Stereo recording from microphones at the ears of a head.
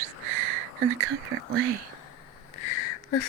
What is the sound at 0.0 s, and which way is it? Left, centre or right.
Whispering, right.